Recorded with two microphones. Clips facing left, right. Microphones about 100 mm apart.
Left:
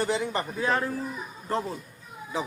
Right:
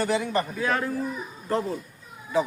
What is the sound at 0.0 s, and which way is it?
Speech, 20° left (ahead or behind).